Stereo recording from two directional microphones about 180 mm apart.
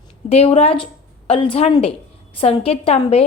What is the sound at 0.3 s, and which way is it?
A woman's voice, 35° left (ahead or behind).